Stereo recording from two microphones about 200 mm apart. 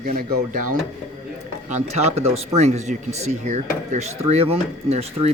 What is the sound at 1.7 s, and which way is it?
Speech, 35° right (ahead or behind).